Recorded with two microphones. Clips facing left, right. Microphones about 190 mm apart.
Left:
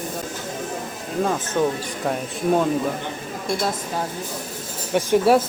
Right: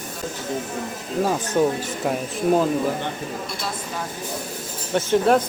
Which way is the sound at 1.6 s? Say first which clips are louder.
Right 2 dB; 15° right (ahead or behind).